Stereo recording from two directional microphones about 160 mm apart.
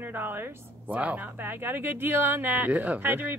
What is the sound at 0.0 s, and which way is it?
Speech, 10° right (ahead or behind).